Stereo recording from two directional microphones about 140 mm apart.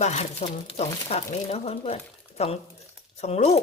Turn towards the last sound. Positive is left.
turn(degrees=50)  # may be behind; listen again after turning